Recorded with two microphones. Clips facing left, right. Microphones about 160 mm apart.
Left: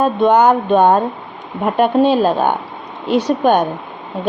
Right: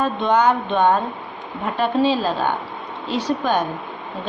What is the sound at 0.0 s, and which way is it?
Speech, 50° left (ahead or behind).